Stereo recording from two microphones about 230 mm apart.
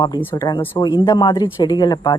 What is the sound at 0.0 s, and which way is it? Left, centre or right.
A woman's voice, centre.